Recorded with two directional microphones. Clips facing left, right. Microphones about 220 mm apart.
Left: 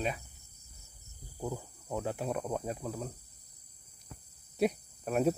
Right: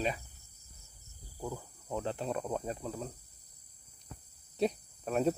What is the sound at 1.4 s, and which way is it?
Cricket, 20° left (ahead or behind).